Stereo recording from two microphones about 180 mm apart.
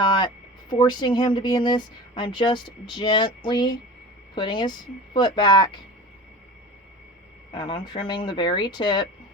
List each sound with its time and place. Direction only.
0.0 s a sound: 25° left (ahead or behind)
0.7 s a woman's voice: 25° left (ahead or behind)
7.5 s a woman's voice: 25° left (ahead or behind)